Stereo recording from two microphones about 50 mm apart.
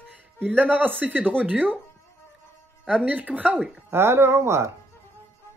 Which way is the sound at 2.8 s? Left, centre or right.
Right.